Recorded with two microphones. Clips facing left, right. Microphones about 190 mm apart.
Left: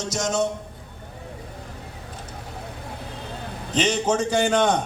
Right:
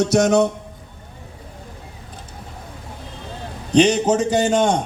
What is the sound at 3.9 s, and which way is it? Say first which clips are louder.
Speech: right 4 dB; 35° right (ahead or behind).